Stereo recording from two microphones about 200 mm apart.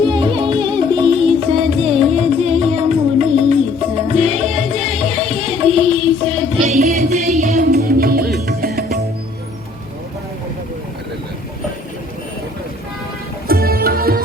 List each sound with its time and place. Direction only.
0.1 s music: 25° right (ahead or behind)
7.7 s music: 50° right (ahead or behind)
13.5 s music: 50° right (ahead or behind)